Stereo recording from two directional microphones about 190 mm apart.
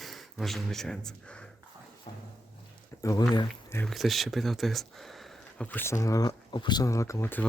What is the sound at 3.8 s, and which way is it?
Speech, centre (ahead or behind).